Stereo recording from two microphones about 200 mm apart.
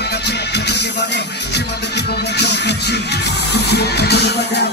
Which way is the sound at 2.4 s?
55° left (ahead or behind).